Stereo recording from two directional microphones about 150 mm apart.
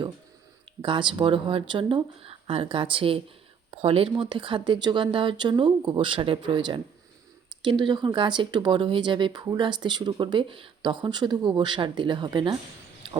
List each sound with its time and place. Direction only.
0.8 s speech: 35° right (ahead or behind)